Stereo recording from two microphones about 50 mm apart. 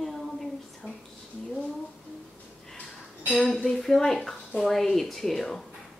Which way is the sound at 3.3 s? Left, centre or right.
Left.